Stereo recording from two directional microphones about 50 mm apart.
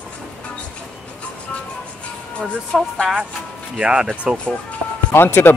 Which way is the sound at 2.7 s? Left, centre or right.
Centre.